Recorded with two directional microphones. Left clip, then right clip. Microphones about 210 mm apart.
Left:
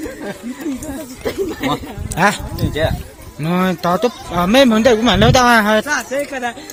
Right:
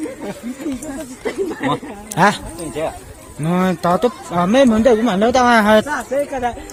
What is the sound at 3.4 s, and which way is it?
Speech, centre (ahead or behind).